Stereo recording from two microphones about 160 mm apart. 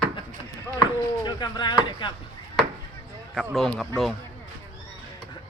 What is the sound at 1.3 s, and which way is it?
Speech, 25° left (ahead or behind).